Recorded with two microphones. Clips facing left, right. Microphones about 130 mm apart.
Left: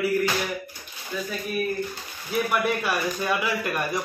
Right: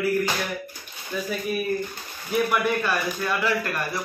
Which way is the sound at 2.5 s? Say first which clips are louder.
Right 1 dB; 10° left (ahead or behind).